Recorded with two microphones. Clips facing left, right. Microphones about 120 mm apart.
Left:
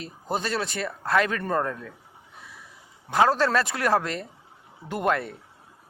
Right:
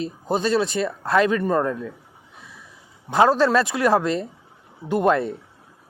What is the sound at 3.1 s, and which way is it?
A man's voice, 20° right (ahead or behind).